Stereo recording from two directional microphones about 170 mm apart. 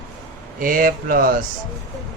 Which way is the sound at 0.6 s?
55° right (ahead or behind).